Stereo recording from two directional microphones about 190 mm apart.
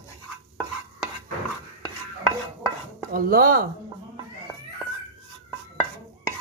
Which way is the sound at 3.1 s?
50° right (ahead or behind).